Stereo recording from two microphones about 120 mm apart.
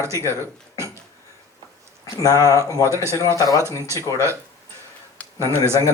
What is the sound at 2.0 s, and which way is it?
Speech, 30° left (ahead or behind).